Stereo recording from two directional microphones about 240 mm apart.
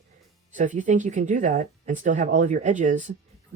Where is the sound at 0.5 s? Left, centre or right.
Right.